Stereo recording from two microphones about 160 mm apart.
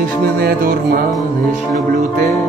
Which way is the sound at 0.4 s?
70° right (ahead or behind).